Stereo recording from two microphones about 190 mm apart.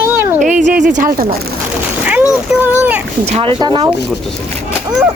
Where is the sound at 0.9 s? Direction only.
50° right (ahead or behind).